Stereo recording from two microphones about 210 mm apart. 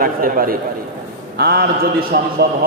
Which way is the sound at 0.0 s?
40° right (ahead or behind).